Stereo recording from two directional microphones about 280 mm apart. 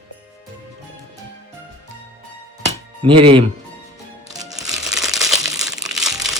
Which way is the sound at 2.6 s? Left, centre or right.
Right.